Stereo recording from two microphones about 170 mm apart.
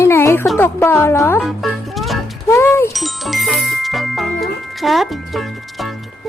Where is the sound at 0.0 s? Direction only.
15° left (ahead or behind).